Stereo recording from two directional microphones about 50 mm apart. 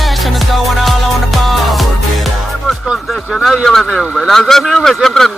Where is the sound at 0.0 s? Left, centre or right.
Centre.